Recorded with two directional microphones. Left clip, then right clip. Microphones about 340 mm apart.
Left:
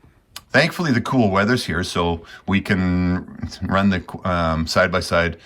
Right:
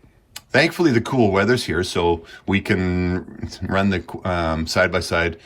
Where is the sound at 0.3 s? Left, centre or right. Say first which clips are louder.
Even; centre.